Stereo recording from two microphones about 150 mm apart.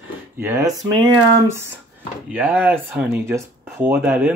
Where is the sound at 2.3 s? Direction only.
10° right (ahead or behind).